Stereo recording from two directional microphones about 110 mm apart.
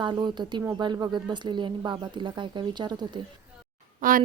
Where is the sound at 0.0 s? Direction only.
40° right (ahead or behind).